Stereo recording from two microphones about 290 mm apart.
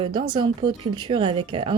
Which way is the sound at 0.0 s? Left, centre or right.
Centre.